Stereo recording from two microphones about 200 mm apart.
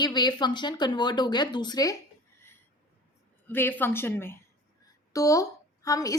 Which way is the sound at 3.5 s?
10° left (ahead or behind).